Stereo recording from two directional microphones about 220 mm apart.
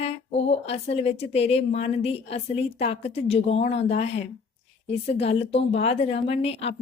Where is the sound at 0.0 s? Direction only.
30° left (ahead or behind).